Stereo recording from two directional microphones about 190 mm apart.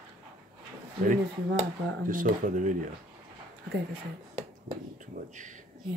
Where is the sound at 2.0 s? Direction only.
45° right (ahead or behind).